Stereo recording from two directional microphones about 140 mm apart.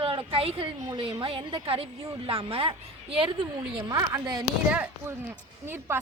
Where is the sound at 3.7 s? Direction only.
25° right (ahead or behind).